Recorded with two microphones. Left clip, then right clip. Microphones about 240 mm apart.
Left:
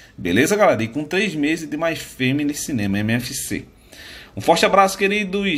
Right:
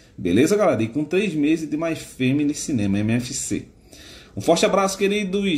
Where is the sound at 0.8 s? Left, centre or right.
Right.